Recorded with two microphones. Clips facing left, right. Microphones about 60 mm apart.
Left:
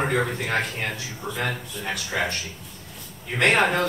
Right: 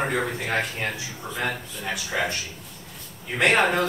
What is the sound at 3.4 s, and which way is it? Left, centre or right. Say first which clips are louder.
Speech: even; centre.